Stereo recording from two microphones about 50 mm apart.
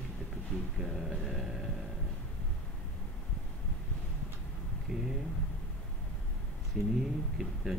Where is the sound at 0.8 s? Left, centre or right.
Centre.